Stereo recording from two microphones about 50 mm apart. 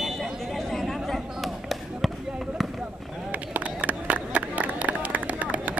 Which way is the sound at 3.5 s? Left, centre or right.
Right.